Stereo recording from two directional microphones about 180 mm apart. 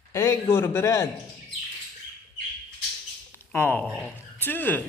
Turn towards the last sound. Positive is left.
turn(degrees=10)  # may be behind; listen again after turning